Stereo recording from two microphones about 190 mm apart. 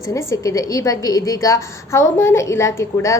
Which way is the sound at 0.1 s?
15° left (ahead or behind).